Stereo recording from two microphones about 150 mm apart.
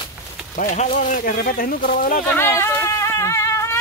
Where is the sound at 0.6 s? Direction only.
55° left (ahead or behind).